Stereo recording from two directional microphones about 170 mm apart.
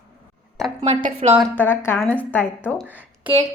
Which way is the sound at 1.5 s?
15° left (ahead or behind).